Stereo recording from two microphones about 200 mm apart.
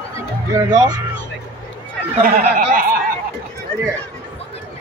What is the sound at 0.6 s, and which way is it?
Speech, 20° right (ahead or behind).